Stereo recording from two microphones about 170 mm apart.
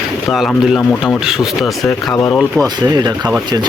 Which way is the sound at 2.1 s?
20° left (ahead or behind).